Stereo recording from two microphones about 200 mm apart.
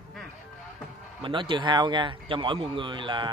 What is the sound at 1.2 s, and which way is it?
Speech, 25° right (ahead or behind).